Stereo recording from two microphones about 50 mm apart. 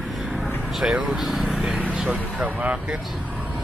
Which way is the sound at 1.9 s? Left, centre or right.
Right.